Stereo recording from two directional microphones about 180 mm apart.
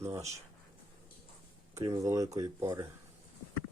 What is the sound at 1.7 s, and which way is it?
Speech, 20° right (ahead or behind).